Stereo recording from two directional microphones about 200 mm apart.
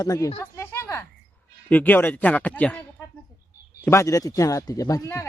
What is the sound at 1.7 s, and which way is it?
Speech, 10° left (ahead or behind).